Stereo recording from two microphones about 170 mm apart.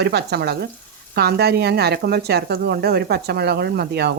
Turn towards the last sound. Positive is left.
turn(degrees=-75)  # may be behind; listen again after turning